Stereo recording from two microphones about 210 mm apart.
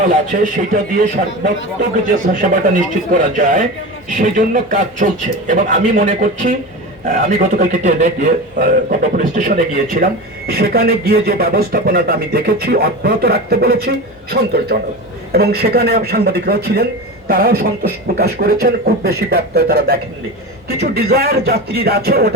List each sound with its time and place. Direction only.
0.0 s speech: 40° right (ahead or behind)
2.0 s a man's voice: 40° right (ahead or behind)